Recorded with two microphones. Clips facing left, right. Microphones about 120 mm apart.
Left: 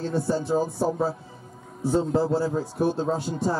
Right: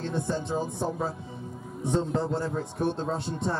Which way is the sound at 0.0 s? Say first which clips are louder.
Left 4 dB; 5° left (ahead or behind).